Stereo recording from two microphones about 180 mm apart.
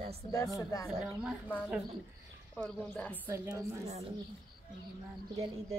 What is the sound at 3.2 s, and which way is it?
Speech, 20° right (ahead or behind).